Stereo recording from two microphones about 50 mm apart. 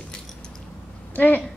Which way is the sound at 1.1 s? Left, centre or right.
Left.